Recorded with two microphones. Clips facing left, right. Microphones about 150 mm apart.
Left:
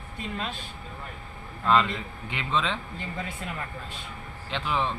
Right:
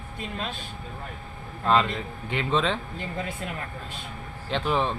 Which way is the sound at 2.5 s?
45° right (ahead or behind).